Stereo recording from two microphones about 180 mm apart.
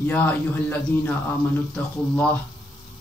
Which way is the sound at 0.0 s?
10° left (ahead or behind).